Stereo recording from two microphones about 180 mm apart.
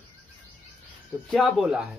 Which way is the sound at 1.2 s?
Centre (ahead or behind).